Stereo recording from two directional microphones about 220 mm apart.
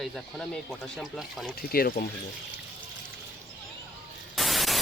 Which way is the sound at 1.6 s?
45° left (ahead or behind).